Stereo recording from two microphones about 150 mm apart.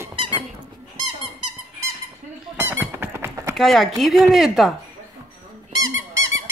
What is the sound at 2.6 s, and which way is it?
Squeak, 15° right (ahead or behind).